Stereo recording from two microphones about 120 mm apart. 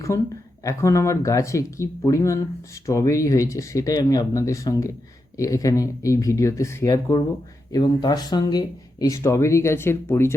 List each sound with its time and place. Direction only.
0.1 s speech: 25° left (ahead or behind)